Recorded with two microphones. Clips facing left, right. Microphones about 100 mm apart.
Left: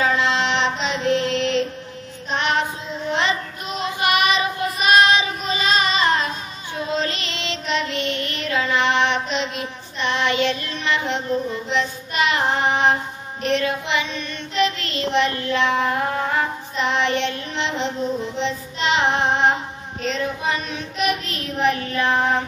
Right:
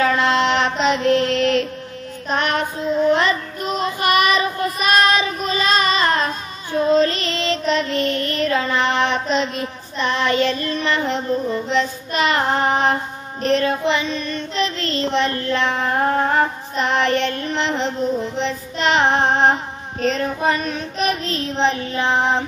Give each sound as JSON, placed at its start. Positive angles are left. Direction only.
{"t": 0.0, "sound": "mantra", "side_deg": -50}
{"t": 2.2, "sound": "child singing", "side_deg": -50}